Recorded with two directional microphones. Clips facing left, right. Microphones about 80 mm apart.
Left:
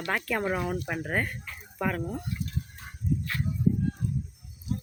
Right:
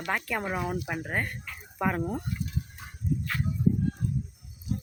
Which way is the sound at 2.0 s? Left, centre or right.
Right.